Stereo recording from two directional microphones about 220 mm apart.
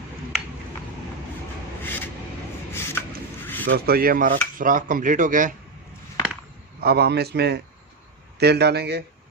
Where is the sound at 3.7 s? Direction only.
45° right (ahead or behind).